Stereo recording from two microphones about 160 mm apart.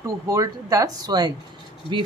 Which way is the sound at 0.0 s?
20° right (ahead or behind).